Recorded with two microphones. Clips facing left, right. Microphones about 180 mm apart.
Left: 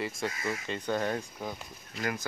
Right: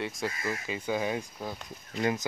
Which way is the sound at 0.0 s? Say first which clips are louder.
Even; centre (ahead or behind).